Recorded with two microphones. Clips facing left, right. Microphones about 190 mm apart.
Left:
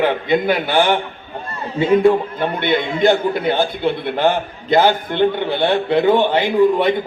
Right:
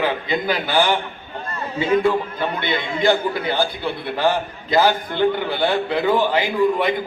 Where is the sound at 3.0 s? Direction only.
20° left (ahead or behind).